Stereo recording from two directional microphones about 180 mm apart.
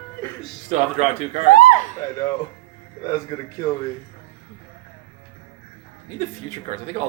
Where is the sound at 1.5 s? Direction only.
45° left (ahead or behind).